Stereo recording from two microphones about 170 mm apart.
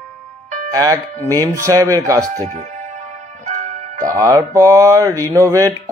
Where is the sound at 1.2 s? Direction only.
20° right (ahead or behind).